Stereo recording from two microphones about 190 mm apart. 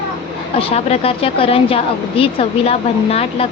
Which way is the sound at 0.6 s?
30° left (ahead or behind).